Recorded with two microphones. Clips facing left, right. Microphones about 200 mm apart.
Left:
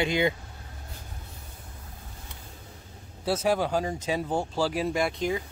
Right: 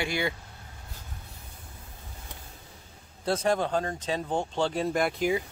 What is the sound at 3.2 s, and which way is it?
Speech, 5° left (ahead or behind).